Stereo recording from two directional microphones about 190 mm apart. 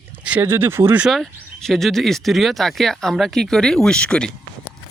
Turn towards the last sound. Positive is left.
turn(degrees=5)  # may be behind; listen again after turning